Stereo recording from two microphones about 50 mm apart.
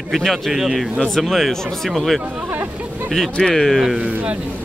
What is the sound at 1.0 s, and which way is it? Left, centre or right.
Speech, centre.